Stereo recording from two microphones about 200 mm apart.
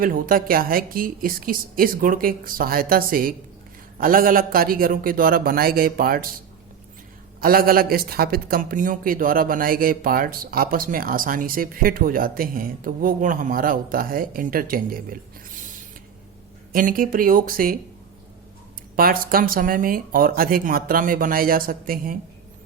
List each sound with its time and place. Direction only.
0.0 s speech: 45° right (ahead or behind)
7.4 s speech: 45° right (ahead or behind)
16.7 s speech: 45° right (ahead or behind)
18.9 s speech: 45° right (ahead or behind)